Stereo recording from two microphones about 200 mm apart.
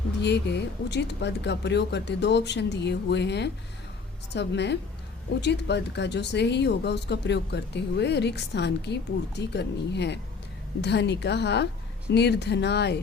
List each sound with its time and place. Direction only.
0.2 s speech: 60° left (ahead or behind)